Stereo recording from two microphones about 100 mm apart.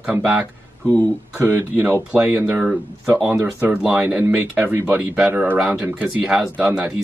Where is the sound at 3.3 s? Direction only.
20° right (ahead or behind).